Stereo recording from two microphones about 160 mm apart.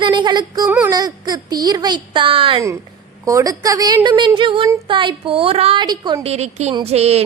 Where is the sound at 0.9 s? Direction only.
25° right (ahead or behind).